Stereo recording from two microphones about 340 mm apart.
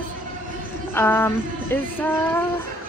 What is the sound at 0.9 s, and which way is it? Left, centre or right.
Speech, centre.